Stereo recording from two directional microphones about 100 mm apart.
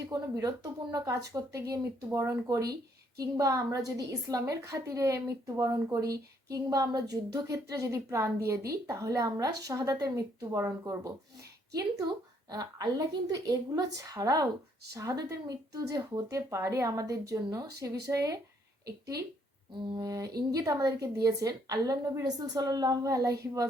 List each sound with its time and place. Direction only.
0.1 s a woman's voice: 40° right (ahead or behind)
2.0 s a woman's voice: 25° right (ahead or behind)
11.7 s a woman's voice: 35° right (ahead or behind)
19.9 s a woman's voice: 40° right (ahead or behind)